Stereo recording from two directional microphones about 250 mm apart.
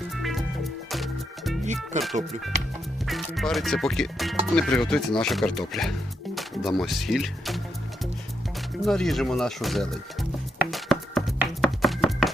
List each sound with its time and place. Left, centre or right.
0.1 s music: centre
1.6 s music: right
3.1 s speech: centre
8.8 s speech: centre
10.7 s music: centre